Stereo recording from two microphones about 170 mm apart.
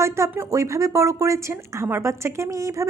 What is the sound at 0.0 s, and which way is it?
Speech, 15° right (ahead or behind).